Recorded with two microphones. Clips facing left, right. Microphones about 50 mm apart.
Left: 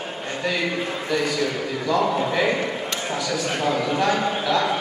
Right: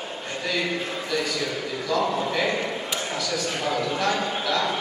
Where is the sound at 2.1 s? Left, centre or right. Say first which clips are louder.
Left 3 dB; centre.